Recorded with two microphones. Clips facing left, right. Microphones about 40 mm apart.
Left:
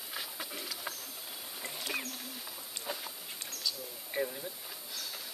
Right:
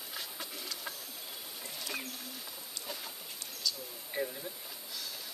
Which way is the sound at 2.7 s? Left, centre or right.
Left.